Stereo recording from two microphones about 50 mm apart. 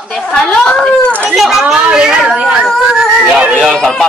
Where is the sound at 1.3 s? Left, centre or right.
Centre.